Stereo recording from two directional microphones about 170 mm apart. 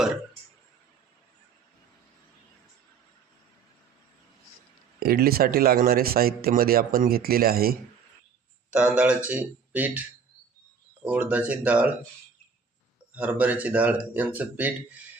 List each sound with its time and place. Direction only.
4.9 s speech: 65° right (ahead or behind)
8.7 s speech: 5° right (ahead or behind)
11.0 s speech: 10° right (ahead or behind)
13.1 s speech: 10° right (ahead or behind)